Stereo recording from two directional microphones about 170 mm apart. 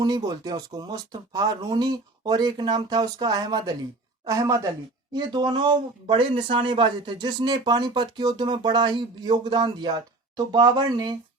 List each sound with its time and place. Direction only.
0.0 s speech: 25° right (ahead or behind)